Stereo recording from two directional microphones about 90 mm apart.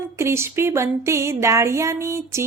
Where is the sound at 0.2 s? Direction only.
30° right (ahead or behind).